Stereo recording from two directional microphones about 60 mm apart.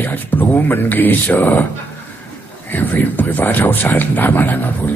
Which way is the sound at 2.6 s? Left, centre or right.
Left.